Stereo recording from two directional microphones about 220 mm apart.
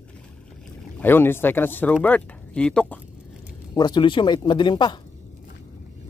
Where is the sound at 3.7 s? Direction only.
20° left (ahead or behind).